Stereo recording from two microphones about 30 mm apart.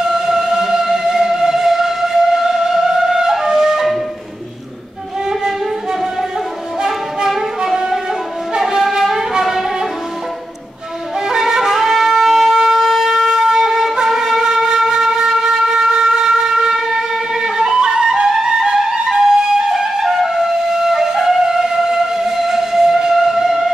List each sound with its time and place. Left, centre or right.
0.0 s music: centre
5.3 s music: right
7.2 s music: centre
11.1 s wind instrument: centre
12.7 s shofar: centre
14.6 s flute: centre